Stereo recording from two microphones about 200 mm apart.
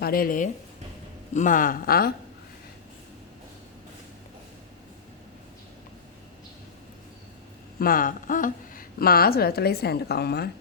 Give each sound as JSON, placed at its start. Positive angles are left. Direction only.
{"t": 0.0, "sound": "speech", "side_deg": 45}
{"t": 7.8, "sound": "speech", "side_deg": 45}